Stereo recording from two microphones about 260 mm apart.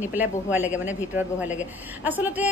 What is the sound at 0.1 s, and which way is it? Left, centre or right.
Speech, centre.